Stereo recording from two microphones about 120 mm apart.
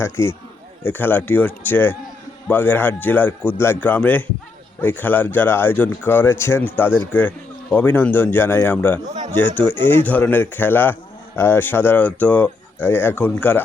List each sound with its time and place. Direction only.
0.0 s a man's voice: 20° left (ahead or behind)